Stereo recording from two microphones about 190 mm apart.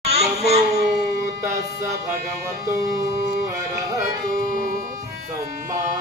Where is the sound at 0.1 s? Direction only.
35° right (ahead or behind).